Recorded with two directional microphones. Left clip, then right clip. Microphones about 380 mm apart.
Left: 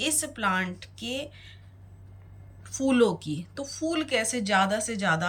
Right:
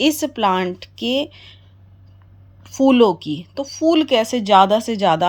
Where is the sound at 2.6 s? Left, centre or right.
Centre.